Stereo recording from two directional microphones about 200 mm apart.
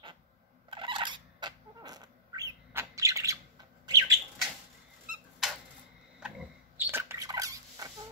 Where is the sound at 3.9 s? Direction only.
20° right (ahead or behind).